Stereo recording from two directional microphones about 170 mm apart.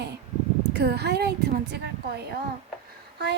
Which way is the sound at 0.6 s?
75° right (ahead or behind).